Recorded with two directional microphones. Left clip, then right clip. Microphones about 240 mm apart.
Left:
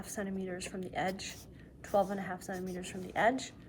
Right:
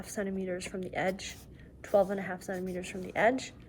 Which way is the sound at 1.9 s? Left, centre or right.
Right.